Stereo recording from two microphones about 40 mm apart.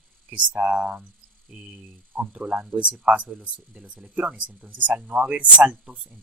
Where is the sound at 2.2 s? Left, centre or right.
Right.